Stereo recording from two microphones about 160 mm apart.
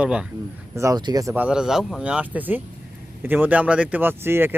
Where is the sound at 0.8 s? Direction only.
25° right (ahead or behind).